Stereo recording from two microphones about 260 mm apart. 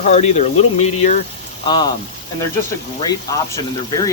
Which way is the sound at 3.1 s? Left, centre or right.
Centre.